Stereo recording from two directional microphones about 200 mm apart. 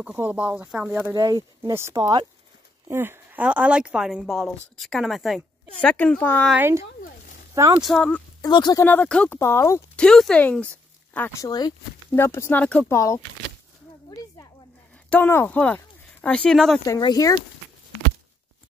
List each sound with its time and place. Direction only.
0.0 s a woman's voice: 10° right (ahead or behind); by 6.5 s 10° left (ahead or behind)
6.5 s speech: 15° right (ahead or behind)
7.0 s a sound: 40° left (ahead or behind)
7.8 s a woman's voice: 5° left (ahead or behind)
8.4 s speech: 20° left (ahead or behind)
8.8 s speech: 10° left (ahead or behind)
14.1 s a sound: 20° left (ahead or behind)
15.0 s speech: 10° left (ahead or behind)
16.8 s speech: 20° left (ahead or behind)